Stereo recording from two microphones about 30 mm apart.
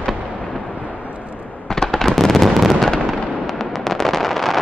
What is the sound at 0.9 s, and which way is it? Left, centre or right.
Vehicle, right.